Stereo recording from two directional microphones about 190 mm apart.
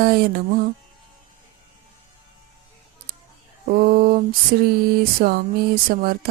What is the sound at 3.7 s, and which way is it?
Mantra, 50° right (ahead or behind).